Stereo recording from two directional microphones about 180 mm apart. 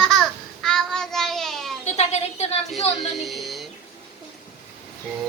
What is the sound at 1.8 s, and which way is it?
Speech, 35° left (ahead or behind).